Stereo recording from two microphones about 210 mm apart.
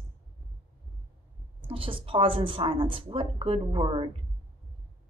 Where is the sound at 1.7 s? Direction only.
25° right (ahead or behind).